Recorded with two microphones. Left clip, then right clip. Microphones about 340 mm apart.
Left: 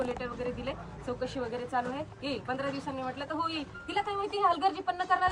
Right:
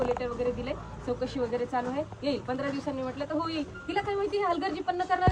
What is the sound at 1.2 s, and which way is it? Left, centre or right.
Speech, centre.